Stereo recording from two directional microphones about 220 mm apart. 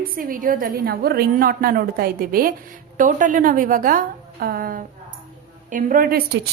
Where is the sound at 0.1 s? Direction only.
40° right (ahead or behind).